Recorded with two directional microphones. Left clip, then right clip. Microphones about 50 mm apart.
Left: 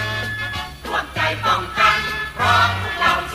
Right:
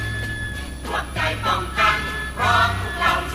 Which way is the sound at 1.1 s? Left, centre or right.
Left.